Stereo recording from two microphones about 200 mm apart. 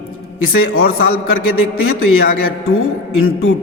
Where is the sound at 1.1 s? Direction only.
90° left.